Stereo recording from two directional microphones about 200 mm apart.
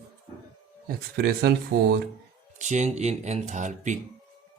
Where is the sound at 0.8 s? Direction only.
50° right (ahead or behind).